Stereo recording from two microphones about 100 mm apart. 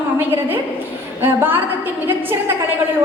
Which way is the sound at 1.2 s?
25° right (ahead or behind).